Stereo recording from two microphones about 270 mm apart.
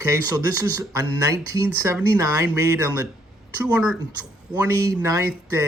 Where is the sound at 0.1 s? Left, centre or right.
Centre.